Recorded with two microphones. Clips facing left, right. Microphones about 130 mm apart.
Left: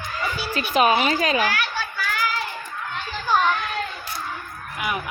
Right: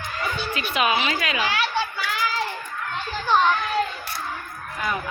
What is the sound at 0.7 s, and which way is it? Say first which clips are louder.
Speech: left 5 dB; 40° left (ahead or behind).